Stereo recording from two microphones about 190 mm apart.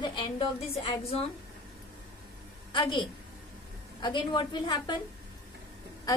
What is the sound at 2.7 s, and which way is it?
A woman's voice, 25° left (ahead or behind).